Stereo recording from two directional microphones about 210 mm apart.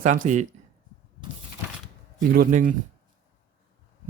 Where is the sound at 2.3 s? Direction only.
40° right (ahead or behind).